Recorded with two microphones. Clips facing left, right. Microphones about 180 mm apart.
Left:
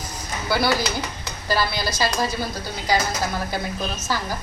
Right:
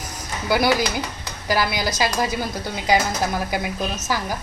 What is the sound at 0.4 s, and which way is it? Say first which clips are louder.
Speech: right 3 dB; 15° right (ahead or behind).